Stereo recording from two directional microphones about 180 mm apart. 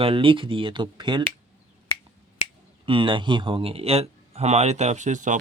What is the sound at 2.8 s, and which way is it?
Speech, 30° right (ahead or behind).